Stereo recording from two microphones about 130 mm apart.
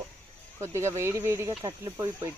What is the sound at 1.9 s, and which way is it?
Speech, 15° right (ahead or behind).